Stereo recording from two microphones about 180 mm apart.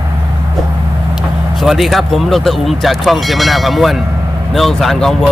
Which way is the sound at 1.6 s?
Centre (ahead or behind).